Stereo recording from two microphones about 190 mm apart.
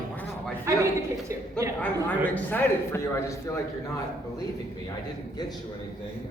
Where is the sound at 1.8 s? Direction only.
10° left (ahead or behind).